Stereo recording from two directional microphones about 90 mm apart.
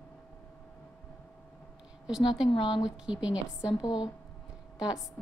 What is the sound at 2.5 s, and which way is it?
Speech, 65° left (ahead or behind).